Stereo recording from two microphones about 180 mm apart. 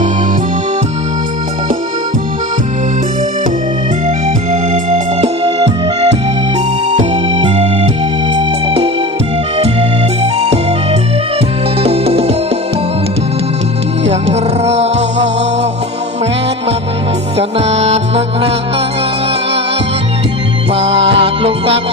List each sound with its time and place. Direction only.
4.7 s music: 35° right (ahead or behind)
11.8 s music: 35° right (ahead or behind)
14.6 s music: 35° right (ahead or behind)
17.3 s music: 35° right (ahead or behind)
20.7 s music: 30° right (ahead or behind)